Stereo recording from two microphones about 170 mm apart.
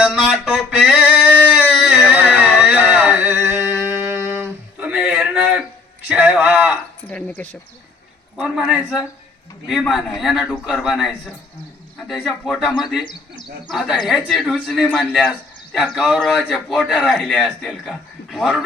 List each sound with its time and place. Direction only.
0.0 s a sound: centre (ahead or behind)
2.0 s music: 10° right (ahead or behind)
6.1 s a sound: 10° right (ahead or behind)
7.1 s a man's voice: 5° left (ahead or behind)
13.1 s speech: 25° left (ahead or behind)
13.7 s a man's voice: centre (ahead or behind)